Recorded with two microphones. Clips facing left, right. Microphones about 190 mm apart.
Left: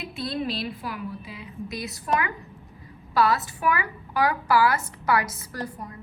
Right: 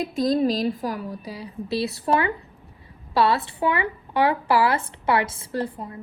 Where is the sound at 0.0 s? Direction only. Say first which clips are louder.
Right 9 dB; 40° right (ahead or behind).